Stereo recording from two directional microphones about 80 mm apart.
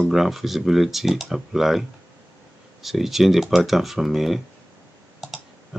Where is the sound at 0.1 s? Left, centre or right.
Centre.